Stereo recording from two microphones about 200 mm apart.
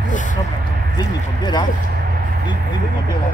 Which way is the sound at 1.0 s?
20° left (ahead or behind).